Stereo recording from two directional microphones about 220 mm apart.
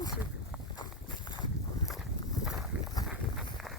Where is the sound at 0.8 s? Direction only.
20° left (ahead or behind).